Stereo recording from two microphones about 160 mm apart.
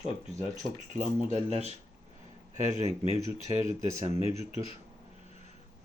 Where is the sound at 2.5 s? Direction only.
45° right (ahead or behind).